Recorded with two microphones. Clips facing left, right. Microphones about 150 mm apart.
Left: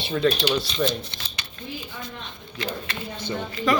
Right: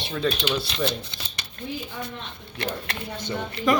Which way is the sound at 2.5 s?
60° right (ahead or behind).